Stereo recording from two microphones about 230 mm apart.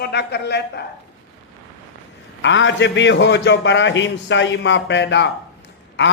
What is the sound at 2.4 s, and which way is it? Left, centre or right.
Speech, left.